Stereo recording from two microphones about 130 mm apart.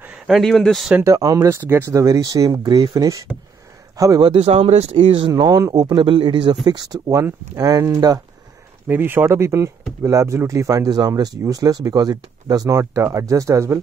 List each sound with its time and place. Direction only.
0.0 s speech: centre (ahead or behind)
0.9 s a man's voice: 25° right (ahead or behind)
4.3 s speech: 50° right (ahead or behind)
5.3 s speech: 30° right (ahead or behind)
8.8 s speech: 15° right (ahead or behind)